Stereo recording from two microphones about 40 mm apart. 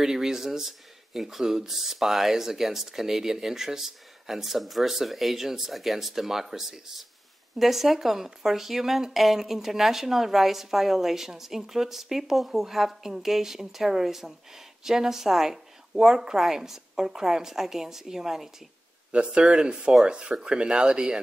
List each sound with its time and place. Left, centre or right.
0.0 s speech: centre
19.3 s speech: right